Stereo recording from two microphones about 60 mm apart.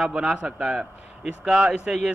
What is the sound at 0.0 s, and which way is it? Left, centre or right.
A man's voice, centre.